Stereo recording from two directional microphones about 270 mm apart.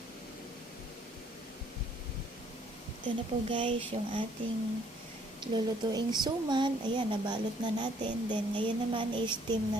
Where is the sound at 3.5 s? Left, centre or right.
Centre.